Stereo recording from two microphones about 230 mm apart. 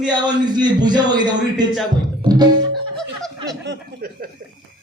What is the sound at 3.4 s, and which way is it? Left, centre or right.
Speech, right.